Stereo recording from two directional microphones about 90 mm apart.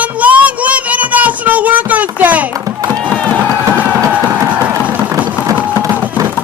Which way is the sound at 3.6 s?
20° right (ahead or behind).